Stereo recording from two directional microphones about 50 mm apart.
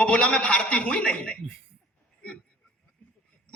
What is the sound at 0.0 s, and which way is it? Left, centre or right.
A man's voice, left.